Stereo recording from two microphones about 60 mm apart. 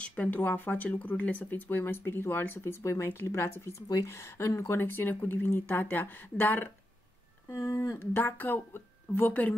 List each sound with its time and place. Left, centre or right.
0.0 s speech: left
2.6 s speech: left
4.1 s speech: left
4.7 s speech: left
7.4 s a sound: left
8.0 s speech: left